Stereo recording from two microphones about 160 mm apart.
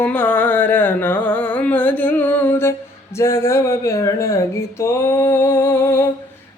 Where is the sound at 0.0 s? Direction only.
10° left (ahead or behind).